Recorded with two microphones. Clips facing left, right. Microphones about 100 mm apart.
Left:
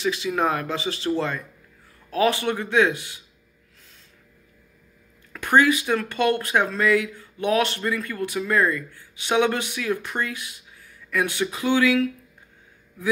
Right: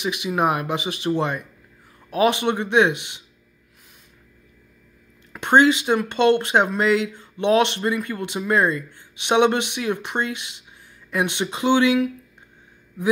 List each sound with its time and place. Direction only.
0.0 s speech: 15° right (ahead or behind)
5.3 s speech: 25° right (ahead or behind)